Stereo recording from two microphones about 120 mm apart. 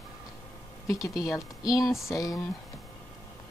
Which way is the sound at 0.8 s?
30° left (ahead or behind).